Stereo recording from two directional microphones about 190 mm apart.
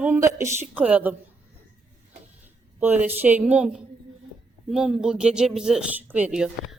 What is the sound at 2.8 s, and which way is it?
Speech, 10° right (ahead or behind).